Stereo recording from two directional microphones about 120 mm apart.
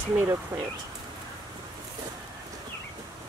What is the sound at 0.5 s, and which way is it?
Speech, 25° right (ahead or behind).